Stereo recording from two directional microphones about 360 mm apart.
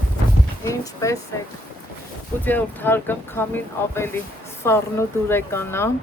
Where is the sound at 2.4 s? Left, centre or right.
Centre.